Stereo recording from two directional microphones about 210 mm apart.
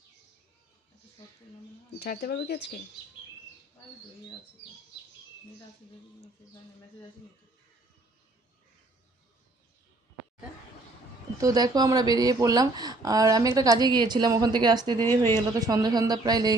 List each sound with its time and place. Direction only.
2.0 s speech: 50° left (ahead or behind)
11.3 s speech: 15° right (ahead or behind)
14.9 s a woman's voice: 10° left (ahead or behind)
15.4 s speech: 15° right (ahead or behind)